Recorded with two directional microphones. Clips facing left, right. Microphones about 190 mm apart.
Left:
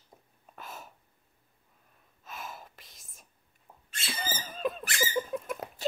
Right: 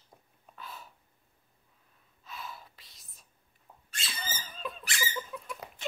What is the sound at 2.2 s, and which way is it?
Gasp, 45° left (ahead or behind).